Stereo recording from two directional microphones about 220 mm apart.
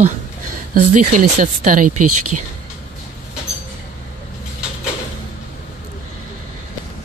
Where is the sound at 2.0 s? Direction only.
90° right.